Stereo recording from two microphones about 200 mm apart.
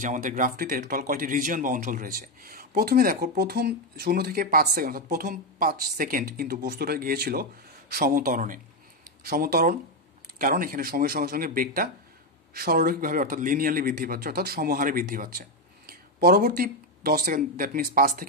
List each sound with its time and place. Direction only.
0.0 s a man's voice: 40° right (ahead or behind)